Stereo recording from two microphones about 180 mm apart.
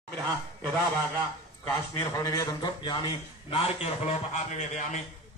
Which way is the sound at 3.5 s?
40° left (ahead or behind).